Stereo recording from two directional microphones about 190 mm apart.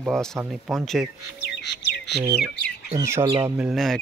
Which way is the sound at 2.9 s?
15° right (ahead or behind).